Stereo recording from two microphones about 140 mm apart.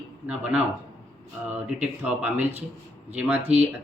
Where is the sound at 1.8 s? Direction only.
10° right (ahead or behind).